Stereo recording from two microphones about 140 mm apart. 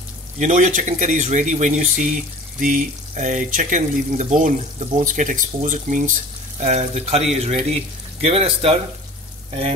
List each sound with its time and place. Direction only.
0.4 s speech: 60° right (ahead or behind)
6.6 s speech: 50° right (ahead or behind)